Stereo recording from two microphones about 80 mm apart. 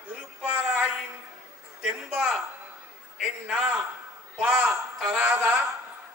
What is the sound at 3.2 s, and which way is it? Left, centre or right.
Speech, centre.